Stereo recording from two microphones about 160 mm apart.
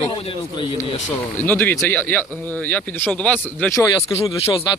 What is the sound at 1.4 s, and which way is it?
Speech, 10° left (ahead or behind).